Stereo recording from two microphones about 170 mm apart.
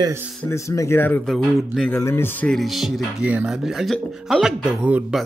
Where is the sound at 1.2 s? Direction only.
Centre (ahead or behind).